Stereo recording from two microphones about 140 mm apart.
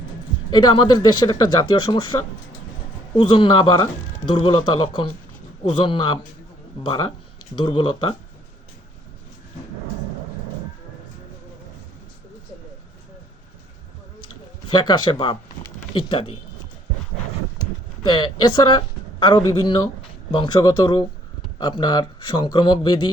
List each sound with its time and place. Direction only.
0.5 s speech: 30° left (ahead or behind)
14.7 s speech: 30° left (ahead or behind)
18.0 s speech: 30° left (ahead or behind)